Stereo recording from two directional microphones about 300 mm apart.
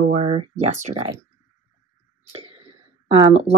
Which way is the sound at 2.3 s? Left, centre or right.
Centre.